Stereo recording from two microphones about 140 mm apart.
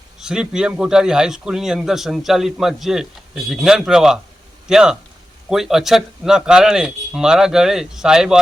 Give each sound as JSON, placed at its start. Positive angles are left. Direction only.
{"t": 0.2, "sound": "a man's voice", "side_deg": -5}